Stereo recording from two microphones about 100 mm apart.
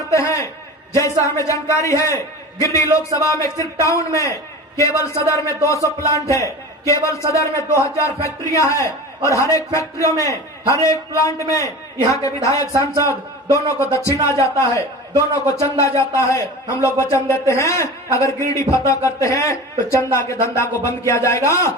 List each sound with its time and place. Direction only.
0.1 s a sound: 30° left (ahead or behind)
0.9 s a man's voice: 30° left (ahead or behind)
12.7 s a man's voice: 35° right (ahead or behind)
13.1 s a man's voice: 30° left (ahead or behind)